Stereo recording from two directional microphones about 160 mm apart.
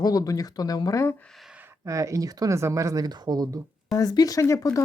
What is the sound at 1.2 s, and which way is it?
Speech, centre (ahead or behind).